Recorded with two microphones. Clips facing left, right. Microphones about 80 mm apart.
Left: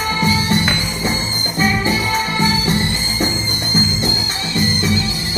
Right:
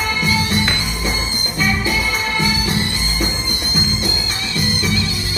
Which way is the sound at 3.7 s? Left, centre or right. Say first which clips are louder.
Left 3 dB; left.